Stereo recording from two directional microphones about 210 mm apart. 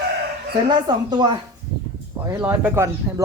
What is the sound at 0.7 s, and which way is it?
Speech, 20° right (ahead or behind).